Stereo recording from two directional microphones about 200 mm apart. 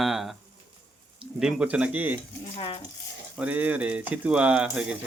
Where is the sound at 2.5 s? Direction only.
25° left (ahead or behind).